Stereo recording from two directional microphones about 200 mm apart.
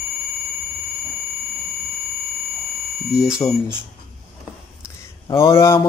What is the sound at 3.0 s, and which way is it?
Speech, centre (ahead or behind).